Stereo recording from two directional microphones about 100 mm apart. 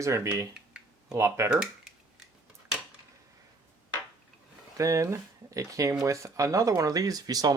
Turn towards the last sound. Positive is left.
turn(degrees=-40)  # may be behind; listen again after turning